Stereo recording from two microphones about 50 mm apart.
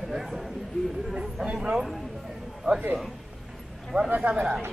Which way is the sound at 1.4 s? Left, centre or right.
Right.